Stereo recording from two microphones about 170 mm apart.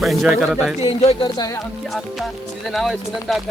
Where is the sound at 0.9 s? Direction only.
35° left (ahead or behind).